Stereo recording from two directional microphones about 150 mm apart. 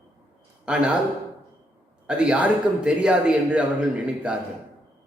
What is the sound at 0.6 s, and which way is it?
Speech, 5° right (ahead or behind).